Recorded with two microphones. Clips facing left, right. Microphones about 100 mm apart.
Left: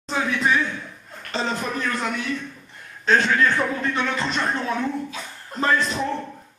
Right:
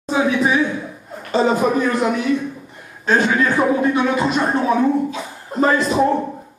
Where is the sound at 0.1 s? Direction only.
10° right (ahead or behind).